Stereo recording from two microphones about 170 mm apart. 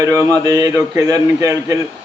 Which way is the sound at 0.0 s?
20° right (ahead or behind).